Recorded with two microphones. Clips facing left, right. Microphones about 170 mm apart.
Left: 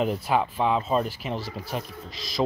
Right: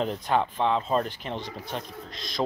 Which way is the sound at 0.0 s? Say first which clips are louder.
Left 2 dB; 5° left (ahead or behind).